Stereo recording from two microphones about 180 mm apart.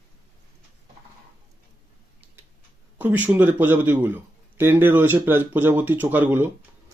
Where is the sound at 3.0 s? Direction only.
10° right (ahead or behind).